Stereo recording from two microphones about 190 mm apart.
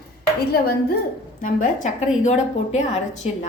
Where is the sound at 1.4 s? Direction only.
45° left (ahead or behind).